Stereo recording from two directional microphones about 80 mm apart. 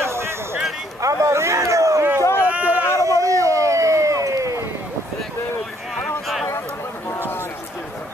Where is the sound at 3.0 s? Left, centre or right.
Right.